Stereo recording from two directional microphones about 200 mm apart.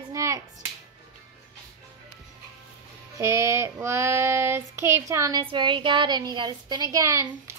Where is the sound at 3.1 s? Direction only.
15° right (ahead or behind).